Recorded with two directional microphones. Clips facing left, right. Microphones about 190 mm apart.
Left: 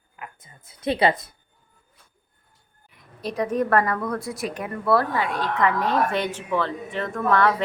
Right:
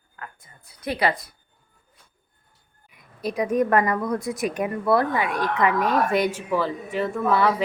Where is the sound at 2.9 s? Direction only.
10° right (ahead or behind).